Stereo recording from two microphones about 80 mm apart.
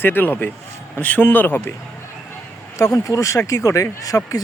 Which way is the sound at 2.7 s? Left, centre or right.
Left.